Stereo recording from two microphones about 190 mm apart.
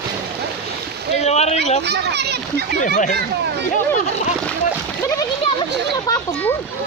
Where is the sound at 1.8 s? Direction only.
60° right (ahead or behind).